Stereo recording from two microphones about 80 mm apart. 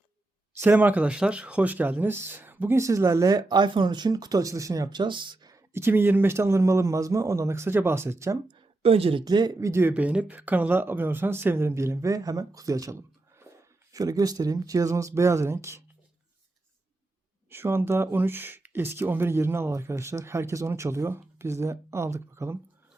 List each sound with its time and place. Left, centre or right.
0.6 s speech: right
3.6 s speech: right
4.9 s speech: right
5.7 s speech: right
9.2 s speech: right
9.6 s speech: right
9.9 s speech: centre; by 15.8 s right
17.5 s speech: right